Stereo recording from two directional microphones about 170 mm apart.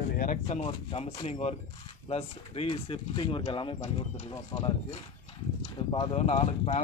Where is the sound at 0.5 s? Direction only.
35° left (ahead or behind).